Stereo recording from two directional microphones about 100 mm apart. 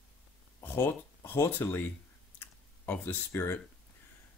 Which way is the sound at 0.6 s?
25° left (ahead or behind).